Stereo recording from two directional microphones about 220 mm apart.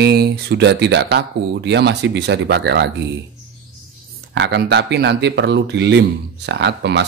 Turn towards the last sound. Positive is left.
turn(degrees=-50)  # may be behind; listen again after turning